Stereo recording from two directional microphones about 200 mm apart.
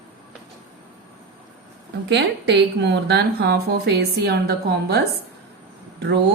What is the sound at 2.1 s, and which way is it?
A woman's voice, 60° right (ahead or behind).